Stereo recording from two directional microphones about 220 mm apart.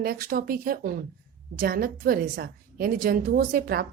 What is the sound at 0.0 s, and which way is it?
A woman's voice, 45° right (ahead or behind).